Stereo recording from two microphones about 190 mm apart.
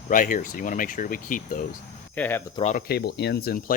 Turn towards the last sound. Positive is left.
turn(degrees=50)  # may be behind; listen again after turning